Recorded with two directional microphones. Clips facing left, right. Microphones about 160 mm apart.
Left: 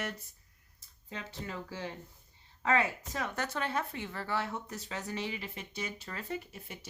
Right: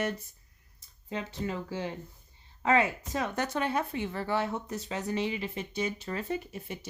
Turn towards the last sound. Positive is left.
turn(degrees=-20)  # may be behind; listen again after turning